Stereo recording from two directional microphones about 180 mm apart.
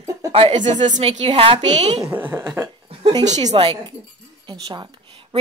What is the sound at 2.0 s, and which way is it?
Speech, 10° right (ahead or behind).